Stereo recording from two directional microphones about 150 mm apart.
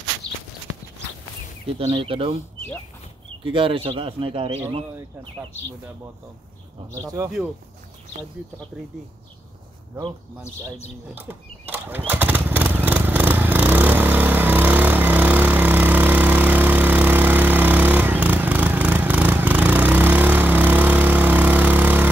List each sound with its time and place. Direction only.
1.8 s speech: 40° right (ahead or behind)
3.4 s speech: 35° right (ahead or behind)
7.0 s speech: 25° right (ahead or behind)
11.1 s mechanisms: 15° right (ahead or behind)
12.1 s a sound: 10° right (ahead or behind)